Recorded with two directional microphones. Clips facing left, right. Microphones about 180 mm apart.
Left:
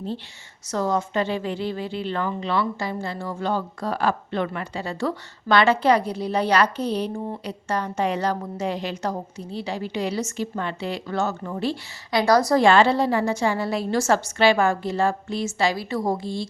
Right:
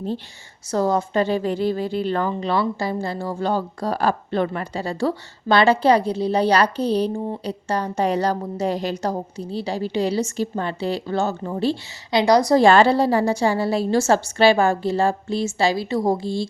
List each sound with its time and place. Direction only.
0.7 s a woman's voice: 35° right (ahead or behind)
12.2 s a woman's voice: 15° right (ahead or behind)
12.5 s a woman's voice: 35° right (ahead or behind)